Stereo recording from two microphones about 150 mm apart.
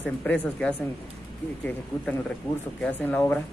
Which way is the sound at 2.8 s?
10° left (ahead or behind).